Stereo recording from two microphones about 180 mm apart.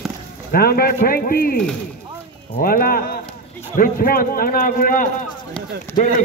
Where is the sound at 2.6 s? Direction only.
55° left (ahead or behind).